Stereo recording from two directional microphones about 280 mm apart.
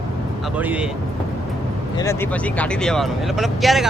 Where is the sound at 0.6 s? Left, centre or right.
Centre.